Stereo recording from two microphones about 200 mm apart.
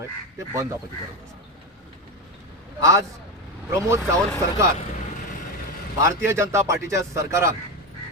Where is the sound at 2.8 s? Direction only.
15° right (ahead or behind).